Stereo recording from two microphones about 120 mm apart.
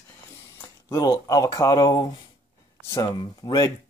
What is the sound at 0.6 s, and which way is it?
Speech, 25° left (ahead or behind).